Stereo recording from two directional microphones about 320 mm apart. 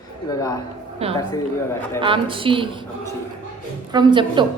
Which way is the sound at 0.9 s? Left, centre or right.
Centre.